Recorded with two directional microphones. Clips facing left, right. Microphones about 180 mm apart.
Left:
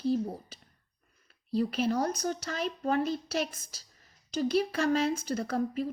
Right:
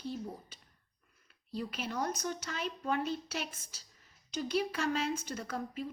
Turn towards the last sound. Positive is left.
turn(degrees=40)  # may be behind; listen again after turning